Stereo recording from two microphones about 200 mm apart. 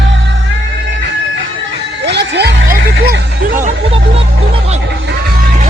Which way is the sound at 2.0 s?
55° right (ahead or behind).